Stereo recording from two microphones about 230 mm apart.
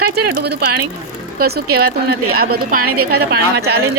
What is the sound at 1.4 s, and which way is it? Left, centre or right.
Speech, right.